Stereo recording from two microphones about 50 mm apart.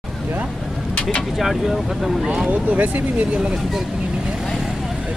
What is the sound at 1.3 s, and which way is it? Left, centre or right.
Speech, centre.